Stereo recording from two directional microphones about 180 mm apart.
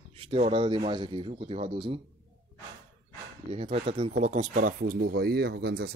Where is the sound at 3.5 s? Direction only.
30° right (ahead or behind); by 5.9 s 65° right (ahead or behind).